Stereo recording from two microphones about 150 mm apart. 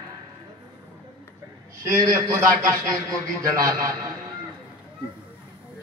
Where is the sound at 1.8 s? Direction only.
20° right (ahead or behind).